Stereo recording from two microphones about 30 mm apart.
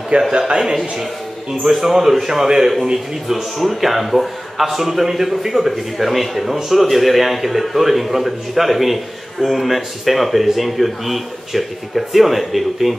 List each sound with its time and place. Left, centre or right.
0.1 s a man's voice: right
1.5 s a man's voice: centre
3.5 s a man's voice: centre
5.7 s a man's voice: centre